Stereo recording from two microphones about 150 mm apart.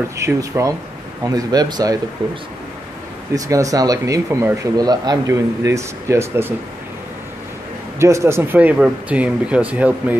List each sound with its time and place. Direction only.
0.2 s speech: 20° right (ahead or behind)
3.3 s speech: 20° right (ahead or behind)
8.0 s speech: 20° right (ahead or behind)